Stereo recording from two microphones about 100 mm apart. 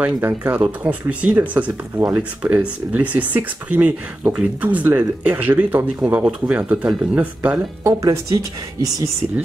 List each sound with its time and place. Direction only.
0.0 s speech: 20° right (ahead or behind)
7.8 s speech: 35° right (ahead or behind)